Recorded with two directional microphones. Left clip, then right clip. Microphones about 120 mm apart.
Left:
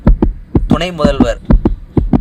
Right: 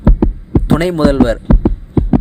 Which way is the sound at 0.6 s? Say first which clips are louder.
Right 1 dB; 45° right (ahead or behind).